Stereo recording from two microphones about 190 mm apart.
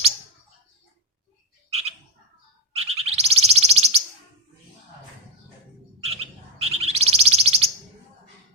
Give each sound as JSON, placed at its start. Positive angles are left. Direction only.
{"t": 2.7, "sound": "bird", "side_deg": -30}
{"t": 6.0, "sound": "bird", "side_deg": -30}